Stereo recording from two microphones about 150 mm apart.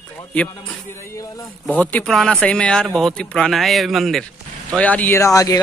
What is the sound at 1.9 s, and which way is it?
Speech, 5° left (ahead or behind).